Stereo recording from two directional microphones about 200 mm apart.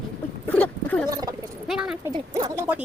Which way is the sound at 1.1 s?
20° right (ahead or behind).